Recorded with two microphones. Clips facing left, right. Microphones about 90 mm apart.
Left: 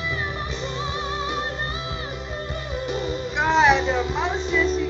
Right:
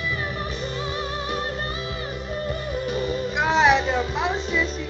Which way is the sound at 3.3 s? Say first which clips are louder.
Left 1 dB; centre (ahead or behind).